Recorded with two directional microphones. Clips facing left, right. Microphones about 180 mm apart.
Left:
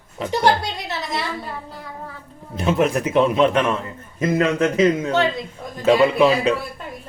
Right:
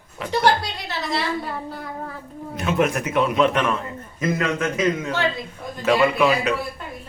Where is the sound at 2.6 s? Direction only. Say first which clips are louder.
Left 2 dB; 30° left (ahead or behind).